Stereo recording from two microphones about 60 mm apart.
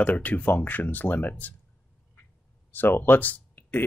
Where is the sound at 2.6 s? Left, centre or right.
Left.